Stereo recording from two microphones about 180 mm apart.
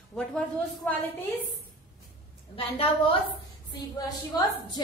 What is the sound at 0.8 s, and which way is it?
Speech, 10° left (ahead or behind).